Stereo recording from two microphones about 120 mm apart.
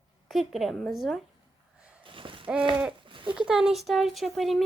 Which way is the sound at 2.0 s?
45° right (ahead or behind).